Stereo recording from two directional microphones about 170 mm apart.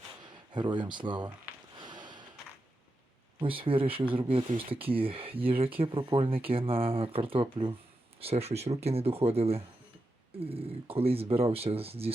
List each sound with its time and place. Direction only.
0.2 s speech: 25° right (ahead or behind)
1.8 s snort: 25° right (ahead or behind)
3.4 s speech: 30° right (ahead or behind)